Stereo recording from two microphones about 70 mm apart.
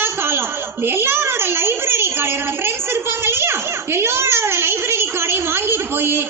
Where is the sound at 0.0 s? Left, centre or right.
Right.